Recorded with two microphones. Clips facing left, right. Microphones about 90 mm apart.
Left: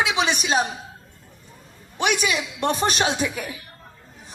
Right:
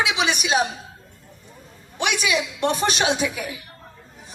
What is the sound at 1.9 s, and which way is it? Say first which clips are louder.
A woman's voice: even; 40° left (ahead or behind).